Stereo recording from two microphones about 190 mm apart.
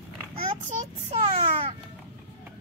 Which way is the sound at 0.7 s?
35° right (ahead or behind).